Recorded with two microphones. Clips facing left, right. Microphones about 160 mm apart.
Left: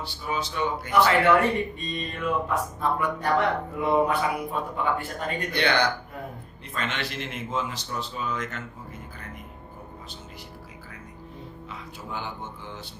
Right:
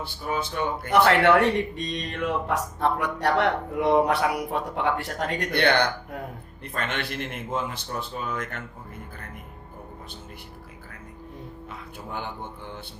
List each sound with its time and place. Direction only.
0.0 s a man's voice: 50° right (ahead or behind)
12.1 s speech: 55° right (ahead or behind)